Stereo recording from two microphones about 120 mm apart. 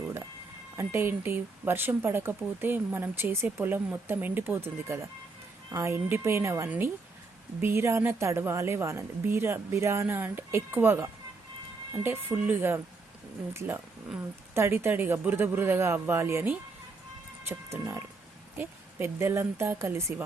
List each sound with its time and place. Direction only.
0.8 s a woman's voice: 20° right (ahead or behind)